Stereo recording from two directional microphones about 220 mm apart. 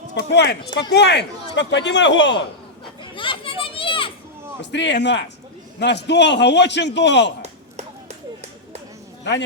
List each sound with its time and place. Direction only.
0.1 s a man's voice: 50° left (ahead or behind)
3.0 s children playing: 25° left (ahead or behind)
4.6 s a man's voice: 55° left (ahead or behind)
7.4 s a sound: 30° right (ahead or behind)